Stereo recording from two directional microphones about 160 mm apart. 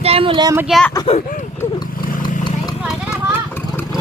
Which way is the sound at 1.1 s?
50° left (ahead or behind).